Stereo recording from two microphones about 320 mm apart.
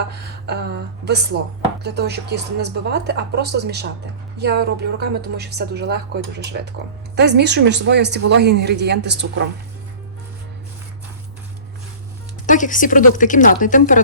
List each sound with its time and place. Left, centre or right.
0.1 s a woman's voice: right
12.5 s a woman's voice: left